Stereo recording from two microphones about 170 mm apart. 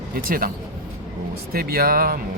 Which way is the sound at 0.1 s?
55° right (ahead or behind).